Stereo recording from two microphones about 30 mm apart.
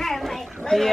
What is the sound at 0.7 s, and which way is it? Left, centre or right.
Speech, left.